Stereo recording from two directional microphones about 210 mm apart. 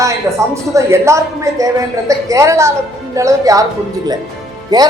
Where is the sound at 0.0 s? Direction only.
15° right (ahead or behind).